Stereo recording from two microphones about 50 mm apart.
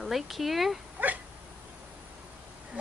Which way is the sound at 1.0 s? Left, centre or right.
Right.